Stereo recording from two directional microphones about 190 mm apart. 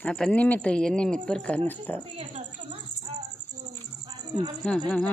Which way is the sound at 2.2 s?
30° right (ahead or behind).